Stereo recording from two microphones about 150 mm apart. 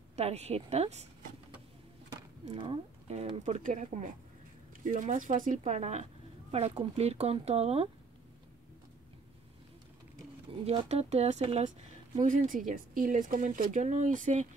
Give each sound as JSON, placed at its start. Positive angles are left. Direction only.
{"t": 0.1, "sound": "speech", "side_deg": -45}
{"t": 2.5, "sound": "speech", "side_deg": -35}
{"t": 10.6, "sound": "speech", "side_deg": -45}
{"t": 12.2, "sound": "speech", "side_deg": -60}